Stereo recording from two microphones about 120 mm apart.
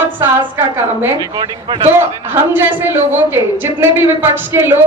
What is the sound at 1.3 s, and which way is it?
Speech, 40° right (ahead or behind).